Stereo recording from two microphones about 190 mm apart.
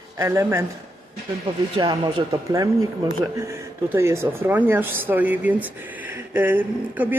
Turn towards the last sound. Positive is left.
turn(degrees=-10)  # may be behind; listen again after turning